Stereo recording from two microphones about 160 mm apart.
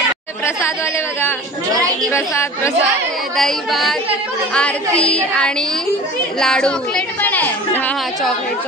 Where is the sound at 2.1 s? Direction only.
15° left (ahead or behind).